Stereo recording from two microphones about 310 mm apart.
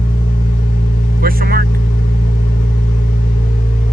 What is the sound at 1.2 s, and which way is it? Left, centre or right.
Vehicle, right.